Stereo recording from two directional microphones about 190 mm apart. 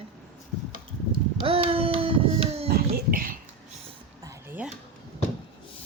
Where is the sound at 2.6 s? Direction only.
50° right (ahead or behind).